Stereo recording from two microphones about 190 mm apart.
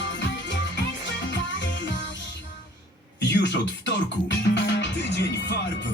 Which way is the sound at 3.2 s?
65° left (ahead or behind).